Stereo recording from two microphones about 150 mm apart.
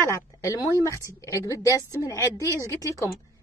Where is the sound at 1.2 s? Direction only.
20° left (ahead or behind).